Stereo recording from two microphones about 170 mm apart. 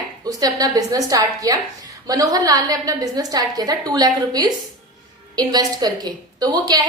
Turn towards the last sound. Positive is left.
turn(degrees=-25)  # may be behind; listen again after turning